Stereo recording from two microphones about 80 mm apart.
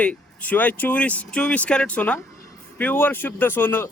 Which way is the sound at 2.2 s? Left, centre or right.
Left.